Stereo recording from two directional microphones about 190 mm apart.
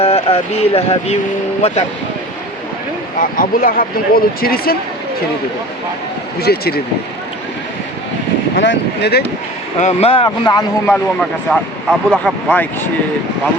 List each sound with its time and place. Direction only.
0.0 s speech: 30° left (ahead or behind)
3.2 s speech: 45° left (ahead or behind)
6.4 s speech: 55° left (ahead or behind)
8.5 s speech: 70° left (ahead or behind)
9.8 s speech: 30° left (ahead or behind)
10.2 s a man's voice: 20° left (ahead or behind)
10.9 s speech: centre (ahead or behind)